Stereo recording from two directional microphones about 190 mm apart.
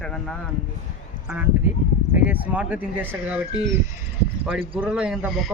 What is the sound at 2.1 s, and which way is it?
Speech, 10° right (ahead or behind).